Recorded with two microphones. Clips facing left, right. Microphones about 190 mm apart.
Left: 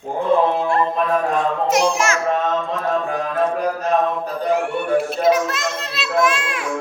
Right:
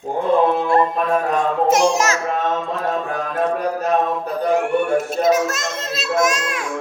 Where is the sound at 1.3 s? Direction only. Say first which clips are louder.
Right 2 dB; 45° right (ahead or behind).